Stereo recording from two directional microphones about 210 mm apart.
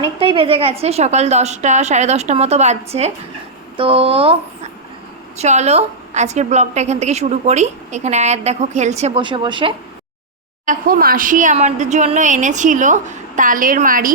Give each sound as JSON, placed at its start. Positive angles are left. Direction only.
{"t": 0.0, "sound": "a woman's voice", "side_deg": -25}
{"t": 10.7, "sound": "a woman's voice", "side_deg": -40}